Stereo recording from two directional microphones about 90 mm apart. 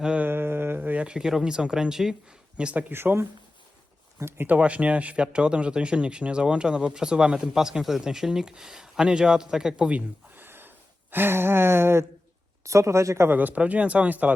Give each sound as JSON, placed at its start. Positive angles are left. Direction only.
{"t": 0.0, "sound": "mantra", "side_deg": -10}
{"t": 0.3, "sound": "speech", "side_deg": -25}
{"t": 2.9, "sound": "speech", "side_deg": -25}
{"t": 10.3, "sound": "a sound", "side_deg": -25}
{"t": 12.6, "sound": "speech", "side_deg": -35}
{"t": 13.3, "sound": "speech", "side_deg": -15}